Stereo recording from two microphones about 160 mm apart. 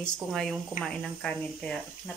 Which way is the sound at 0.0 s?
Centre (ahead or behind).